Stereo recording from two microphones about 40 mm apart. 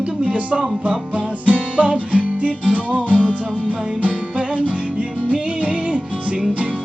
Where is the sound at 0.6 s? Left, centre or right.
Centre.